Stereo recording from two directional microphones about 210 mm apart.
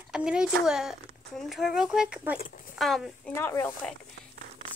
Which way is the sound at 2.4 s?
40° left (ahead or behind).